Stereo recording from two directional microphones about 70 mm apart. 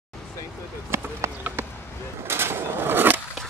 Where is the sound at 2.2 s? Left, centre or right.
Right.